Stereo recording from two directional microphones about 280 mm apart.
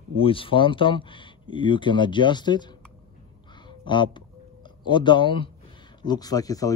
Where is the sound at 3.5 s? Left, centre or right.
Centre.